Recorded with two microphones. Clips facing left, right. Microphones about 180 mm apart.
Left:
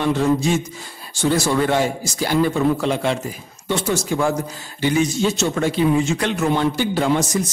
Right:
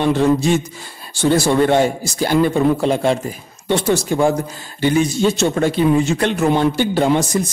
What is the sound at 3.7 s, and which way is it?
Speech, 65° right (ahead or behind).